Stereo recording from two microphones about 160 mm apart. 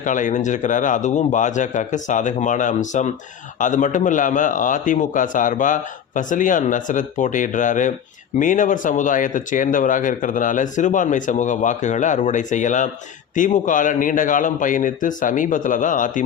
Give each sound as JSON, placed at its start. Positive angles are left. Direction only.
{"t": 0.0, "sound": "a man's voice", "side_deg": 55}